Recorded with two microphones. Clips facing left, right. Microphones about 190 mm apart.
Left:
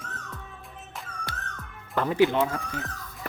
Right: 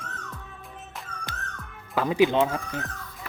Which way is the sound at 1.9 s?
15° right (ahead or behind).